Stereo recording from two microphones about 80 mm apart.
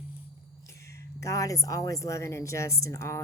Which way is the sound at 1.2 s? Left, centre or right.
Left.